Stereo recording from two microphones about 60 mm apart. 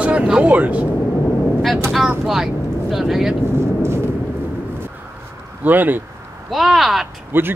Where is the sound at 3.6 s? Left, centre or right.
Right.